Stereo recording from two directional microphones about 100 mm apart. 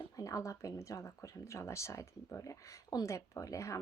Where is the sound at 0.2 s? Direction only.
35° left (ahead or behind).